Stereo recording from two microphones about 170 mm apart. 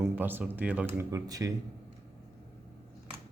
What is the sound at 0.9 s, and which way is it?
Speech, 20° right (ahead or behind).